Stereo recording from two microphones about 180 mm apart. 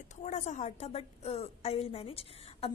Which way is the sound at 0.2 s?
40° left (ahead or behind).